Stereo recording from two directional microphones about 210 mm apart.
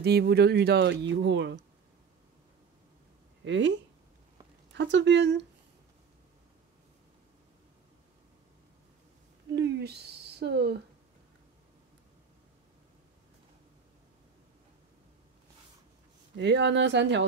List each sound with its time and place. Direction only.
0.0 s speech: 50° right (ahead or behind)
3.4 s speech: 55° right (ahead or behind)
4.7 s speech: 55° right (ahead or behind)
9.6 s speech: 50° right (ahead or behind)
16.3 s speech: 60° right (ahead or behind)